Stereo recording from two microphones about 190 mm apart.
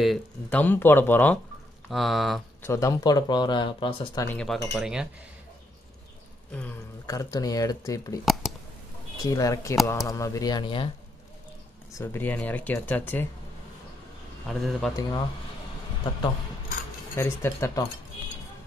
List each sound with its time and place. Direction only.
0.0 s speech: 5° left (ahead or behind)
2.6 s speech: 15° left (ahead or behind)
4.3 s speech: 5° left (ahead or behind)
7.1 s speech: 20° left (ahead or behind)
8.3 s clicking: centre (ahead or behind)
9.2 s speech: 20° left (ahead or behind)
12.0 s speech: 10° left (ahead or behind)
14.5 s speech: centre (ahead or behind)
15.0 s speech: 20° left (ahead or behind)
17.1 s speech: 10° left (ahead or behind)